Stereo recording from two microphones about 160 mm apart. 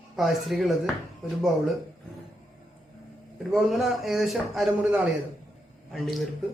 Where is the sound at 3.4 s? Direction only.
Centre (ahead or behind).